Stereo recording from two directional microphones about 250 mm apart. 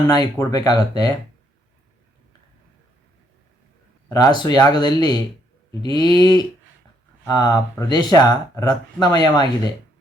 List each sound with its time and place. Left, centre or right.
0.1 s speech: centre
4.1 s speech: centre